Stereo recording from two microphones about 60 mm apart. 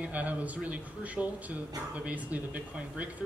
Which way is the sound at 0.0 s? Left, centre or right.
Right.